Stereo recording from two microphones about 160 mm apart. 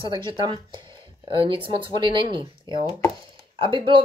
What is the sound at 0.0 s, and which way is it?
Speech, 30° right (ahead or behind).